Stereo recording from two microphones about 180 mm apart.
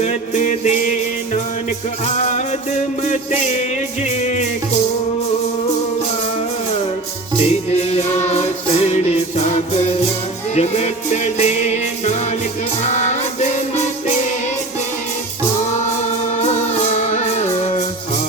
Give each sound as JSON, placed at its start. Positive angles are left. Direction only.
{"t": 0.0, "sound": "music", "side_deg": 40}
{"t": 7.7, "sound": "music", "side_deg": 35}
{"t": 16.4, "sound": "music", "side_deg": 40}